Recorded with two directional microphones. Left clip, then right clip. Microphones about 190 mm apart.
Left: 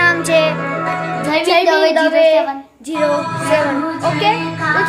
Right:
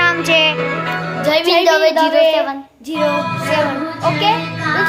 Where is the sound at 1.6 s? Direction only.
35° right (ahead or behind).